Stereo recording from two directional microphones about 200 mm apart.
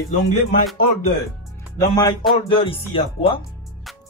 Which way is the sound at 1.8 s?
20° left (ahead or behind).